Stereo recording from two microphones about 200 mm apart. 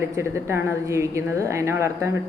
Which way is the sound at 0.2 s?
15° right (ahead or behind).